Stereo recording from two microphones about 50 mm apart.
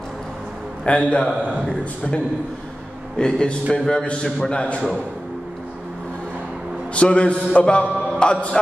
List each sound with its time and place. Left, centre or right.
0.8 s a man's voice: centre
7.0 s a man's voice: left